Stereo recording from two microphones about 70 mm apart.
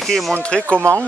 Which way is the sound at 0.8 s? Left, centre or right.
Right.